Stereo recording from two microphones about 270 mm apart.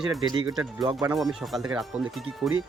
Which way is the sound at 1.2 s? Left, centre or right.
Centre.